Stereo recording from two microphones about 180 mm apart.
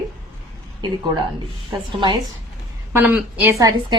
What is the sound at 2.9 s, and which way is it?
A woman's voice, 10° right (ahead or behind).